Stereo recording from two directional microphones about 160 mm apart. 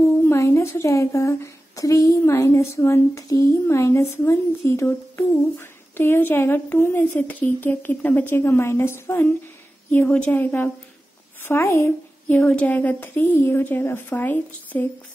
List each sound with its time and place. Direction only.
0.3 s speech: 15° left (ahead or behind)